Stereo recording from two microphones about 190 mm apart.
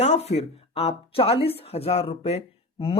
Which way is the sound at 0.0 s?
35° left (ahead or behind).